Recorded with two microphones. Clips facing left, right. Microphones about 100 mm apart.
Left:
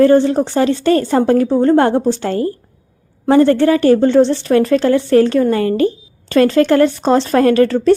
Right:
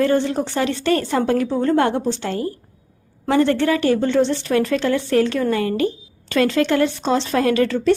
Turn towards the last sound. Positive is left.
turn(degrees=40)  # may be behind; listen again after turning